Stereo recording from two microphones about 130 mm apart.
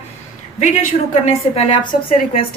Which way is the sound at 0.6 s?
60° left (ahead or behind).